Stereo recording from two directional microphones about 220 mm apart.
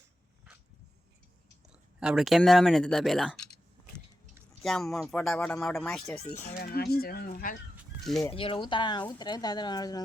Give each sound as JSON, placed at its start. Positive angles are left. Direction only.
{"t": 2.0, "sound": "speech", "side_deg": -5}
{"t": 4.6, "sound": "speech", "side_deg": 0}
{"t": 6.6, "sound": "speech", "side_deg": 45}
{"t": 8.0, "sound": "speech", "side_deg": 0}
{"t": 8.3, "sound": "speech", "side_deg": 25}